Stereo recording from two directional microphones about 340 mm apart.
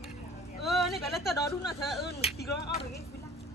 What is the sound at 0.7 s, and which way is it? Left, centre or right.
Speech, centre.